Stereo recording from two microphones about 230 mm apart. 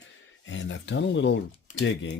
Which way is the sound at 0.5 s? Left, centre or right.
Left.